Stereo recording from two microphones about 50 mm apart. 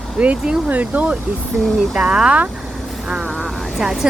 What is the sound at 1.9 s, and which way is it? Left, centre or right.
Speech, centre.